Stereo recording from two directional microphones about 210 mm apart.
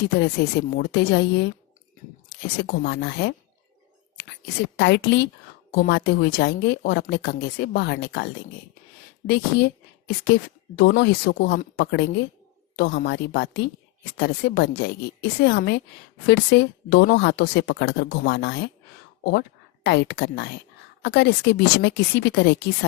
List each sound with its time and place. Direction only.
0.2 s speech: 50° left (ahead or behind)
2.6 s speech: 55° left (ahead or behind)
4.8 s speech: 55° left (ahead or behind)